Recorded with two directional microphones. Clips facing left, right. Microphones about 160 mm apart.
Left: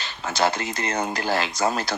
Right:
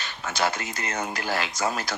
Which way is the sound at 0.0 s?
35° left (ahead or behind).